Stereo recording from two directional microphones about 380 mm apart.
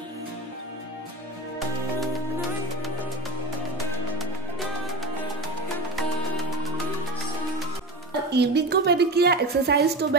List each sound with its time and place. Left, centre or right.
4.2 s music: centre
8.3 s a woman's voice: right